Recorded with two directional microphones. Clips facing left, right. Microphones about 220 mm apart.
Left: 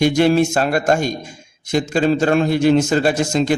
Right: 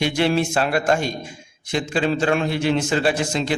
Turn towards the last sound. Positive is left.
turn(degrees=45)  # may be behind; listen again after turning